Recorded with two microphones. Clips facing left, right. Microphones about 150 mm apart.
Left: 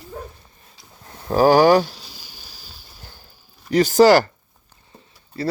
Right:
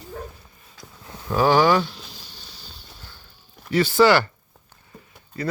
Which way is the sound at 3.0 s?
40° left (ahead or behind).